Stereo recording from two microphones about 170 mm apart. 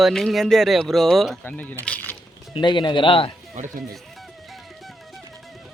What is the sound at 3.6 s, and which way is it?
Speech, 45° right (ahead or behind).